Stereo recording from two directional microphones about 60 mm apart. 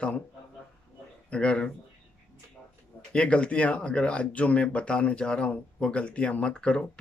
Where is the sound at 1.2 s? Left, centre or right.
Centre.